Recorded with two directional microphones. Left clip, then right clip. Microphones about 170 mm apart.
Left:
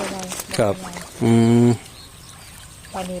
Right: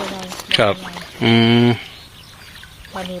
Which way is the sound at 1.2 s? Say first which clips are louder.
Right 3 dB; 5° left (ahead or behind).